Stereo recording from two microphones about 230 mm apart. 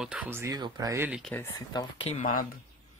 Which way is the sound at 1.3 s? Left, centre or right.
Centre.